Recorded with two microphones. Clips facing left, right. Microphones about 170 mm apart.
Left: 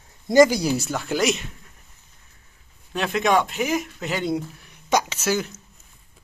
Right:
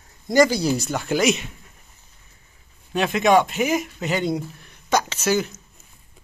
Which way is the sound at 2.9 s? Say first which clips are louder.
Right 3 dB; 5° right (ahead or behind).